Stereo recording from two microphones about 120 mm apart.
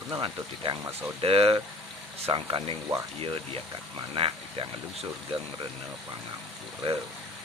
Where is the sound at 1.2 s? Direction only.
50° right (ahead or behind).